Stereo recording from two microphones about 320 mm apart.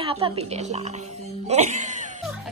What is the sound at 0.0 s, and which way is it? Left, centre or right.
Speech, centre.